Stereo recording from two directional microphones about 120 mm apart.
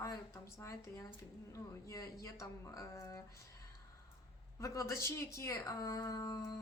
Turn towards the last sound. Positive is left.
turn(degrees=25)  # may be behind; listen again after turning